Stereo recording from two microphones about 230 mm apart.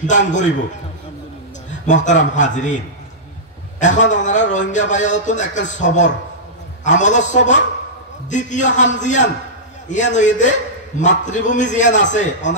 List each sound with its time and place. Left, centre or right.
0.0 s a man's voice: left
1.7 s a man's voice: left
3.8 s a man's voice: left